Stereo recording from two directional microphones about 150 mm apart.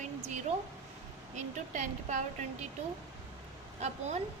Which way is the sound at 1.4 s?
55° right (ahead or behind).